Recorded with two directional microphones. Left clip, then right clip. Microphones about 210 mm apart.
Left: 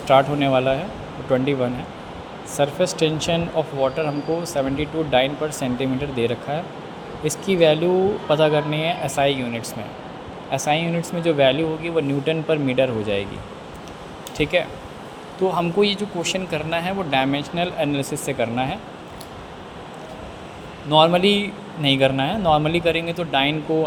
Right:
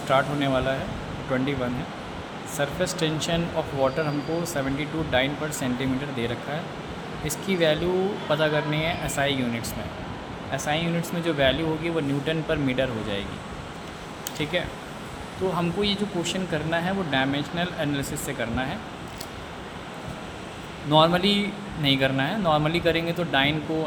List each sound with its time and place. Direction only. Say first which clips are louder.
0.1 s speech: left 7 dB; 20° left (ahead or behind)
2.6 s speech: left 7 dB; 15° left (ahead or behind)
14.3 s speech: left 7 dB; 25° left (ahead or behind)
20.9 s speech: left 4 dB; 20° left (ahead or behind)